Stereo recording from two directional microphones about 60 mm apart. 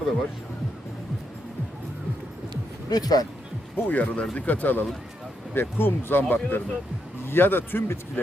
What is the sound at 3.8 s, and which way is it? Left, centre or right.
Speech, left.